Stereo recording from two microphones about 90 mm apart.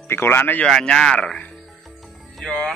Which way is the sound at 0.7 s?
5° left (ahead or behind).